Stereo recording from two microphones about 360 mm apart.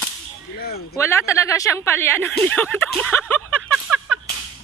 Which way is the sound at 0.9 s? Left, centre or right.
Centre.